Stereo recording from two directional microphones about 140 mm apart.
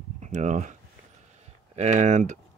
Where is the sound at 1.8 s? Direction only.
60° right (ahead or behind).